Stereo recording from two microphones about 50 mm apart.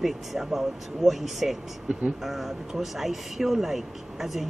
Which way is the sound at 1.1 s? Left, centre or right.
Centre.